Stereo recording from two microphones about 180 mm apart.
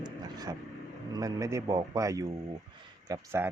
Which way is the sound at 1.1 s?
20° right (ahead or behind).